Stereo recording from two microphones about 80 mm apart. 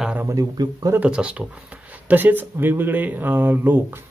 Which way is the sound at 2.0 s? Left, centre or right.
Right.